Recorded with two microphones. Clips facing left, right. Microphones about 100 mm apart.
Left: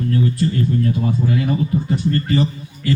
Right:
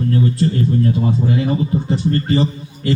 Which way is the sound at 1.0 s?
25° right (ahead or behind).